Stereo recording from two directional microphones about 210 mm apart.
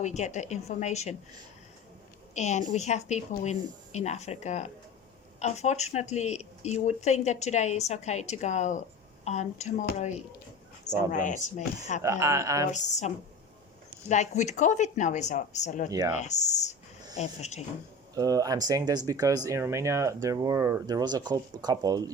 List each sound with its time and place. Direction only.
0.0 s speech: 35° left (ahead or behind)
2.3 s speech: 35° left (ahead or behind)
10.8 s speech: 35° left (ahead or behind)
12.0 s speech: 15° right (ahead or behind)
12.7 s speech: 35° left (ahead or behind)
15.9 s speech: 15° right (ahead or behind)
16.1 s speech: 35° left (ahead or behind)
18.1 s speech: 15° right (ahead or behind)